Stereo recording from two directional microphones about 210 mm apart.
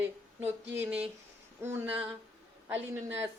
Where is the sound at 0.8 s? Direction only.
5° right (ahead or behind).